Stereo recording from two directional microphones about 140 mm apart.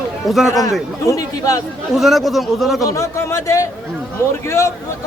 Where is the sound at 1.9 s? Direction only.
Centre (ahead or behind).